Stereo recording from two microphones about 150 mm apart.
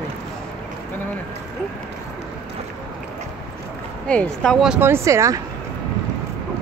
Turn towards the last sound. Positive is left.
turn(degrees=-20)  # may be behind; listen again after turning